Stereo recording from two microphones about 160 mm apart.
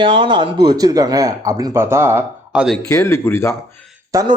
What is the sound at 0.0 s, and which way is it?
Speech, 30° right (ahead or behind).